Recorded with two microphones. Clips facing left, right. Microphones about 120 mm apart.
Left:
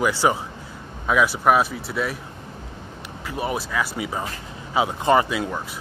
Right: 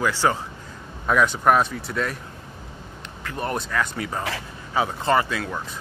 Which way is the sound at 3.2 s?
5° left (ahead or behind).